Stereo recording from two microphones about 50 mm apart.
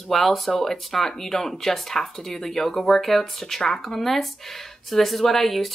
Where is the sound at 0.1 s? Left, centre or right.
Centre.